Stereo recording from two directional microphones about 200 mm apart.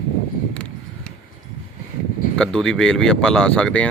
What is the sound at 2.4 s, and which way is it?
Speech, 5° left (ahead or behind).